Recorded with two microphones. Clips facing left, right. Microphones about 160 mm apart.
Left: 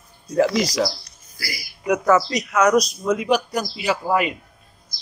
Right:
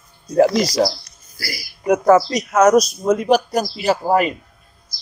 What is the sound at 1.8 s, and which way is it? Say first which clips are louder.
A man's voice: right 4 dB; 50° right (ahead or behind).